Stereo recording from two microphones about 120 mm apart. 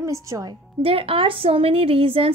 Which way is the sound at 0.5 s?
50° right (ahead or behind).